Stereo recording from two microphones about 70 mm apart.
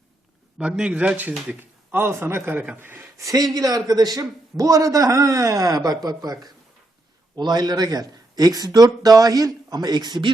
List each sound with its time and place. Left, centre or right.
0.6 s a man's voice: centre; by 3.1 s right
3.3 s a man's voice: right
7.3 s speech: right